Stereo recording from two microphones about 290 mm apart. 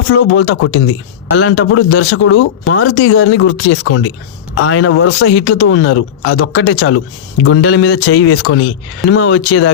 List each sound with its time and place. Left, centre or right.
0.3 s speech: left